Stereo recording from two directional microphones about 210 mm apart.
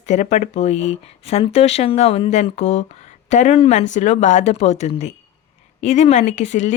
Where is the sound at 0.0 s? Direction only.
30° left (ahead or behind).